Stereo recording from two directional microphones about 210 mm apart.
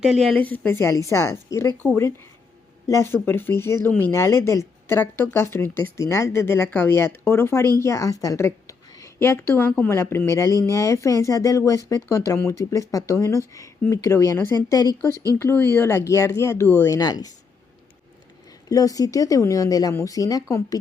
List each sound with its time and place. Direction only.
0.0 s speech: centre (ahead or behind); by 17.3 s 20° left (ahead or behind)
18.7 s speech: 15° left (ahead or behind)